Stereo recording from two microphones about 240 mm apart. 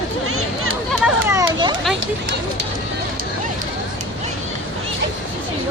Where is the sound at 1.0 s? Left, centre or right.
Centre.